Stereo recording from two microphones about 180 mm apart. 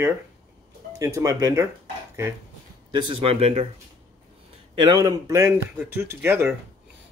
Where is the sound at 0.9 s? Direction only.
20° right (ahead or behind).